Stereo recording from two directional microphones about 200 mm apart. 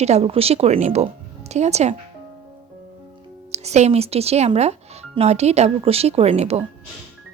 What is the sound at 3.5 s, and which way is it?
Speech, 35° right (ahead or behind).